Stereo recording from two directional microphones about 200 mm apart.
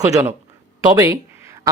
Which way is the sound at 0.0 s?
15° right (ahead or behind).